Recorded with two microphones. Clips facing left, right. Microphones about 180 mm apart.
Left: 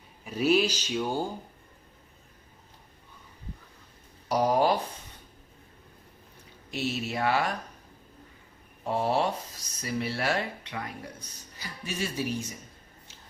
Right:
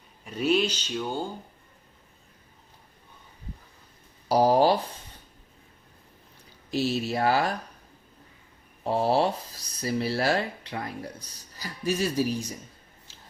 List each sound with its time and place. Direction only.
0.3 s speech: 5° left (ahead or behind)
4.3 s speech: 30° right (ahead or behind)
6.7 s speech: 35° right (ahead or behind)
8.8 s speech: 35° right (ahead or behind)